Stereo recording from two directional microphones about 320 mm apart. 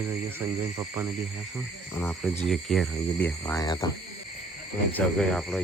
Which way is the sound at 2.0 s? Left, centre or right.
Centre.